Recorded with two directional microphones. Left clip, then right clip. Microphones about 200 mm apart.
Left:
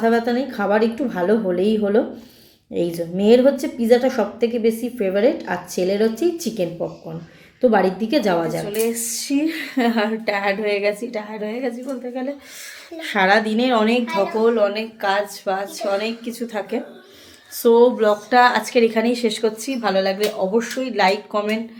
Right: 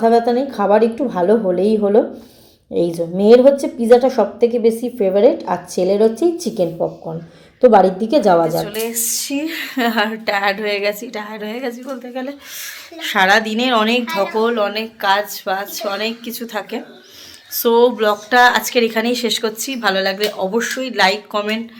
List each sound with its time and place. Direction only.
0.0 s a woman's voice: 10° right (ahead or behind)
8.5 s speech: centre (ahead or behind)
14.3 s a woman's voice: 10° right (ahead or behind)
16.4 s speech: 5° left (ahead or behind)